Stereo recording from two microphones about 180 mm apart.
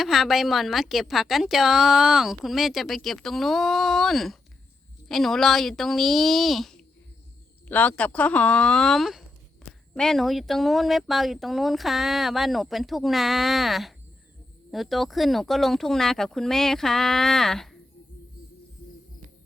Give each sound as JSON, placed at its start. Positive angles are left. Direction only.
{"t": 0.0, "sound": "a woman's voice", "side_deg": 0}